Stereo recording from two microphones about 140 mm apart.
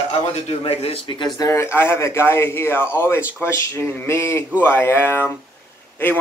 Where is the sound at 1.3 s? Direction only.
20° left (ahead or behind).